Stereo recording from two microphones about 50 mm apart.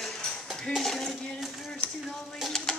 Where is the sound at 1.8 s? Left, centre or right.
Left.